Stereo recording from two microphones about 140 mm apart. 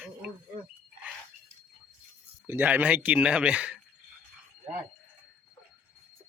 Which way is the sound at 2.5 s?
15° right (ahead or behind).